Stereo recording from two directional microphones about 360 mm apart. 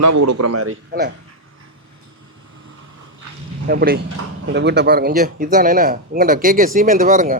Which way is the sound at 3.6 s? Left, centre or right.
Right.